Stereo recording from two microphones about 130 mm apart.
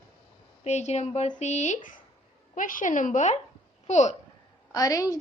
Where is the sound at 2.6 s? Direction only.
90° left; by 4.1 s 60° left (ahead or behind).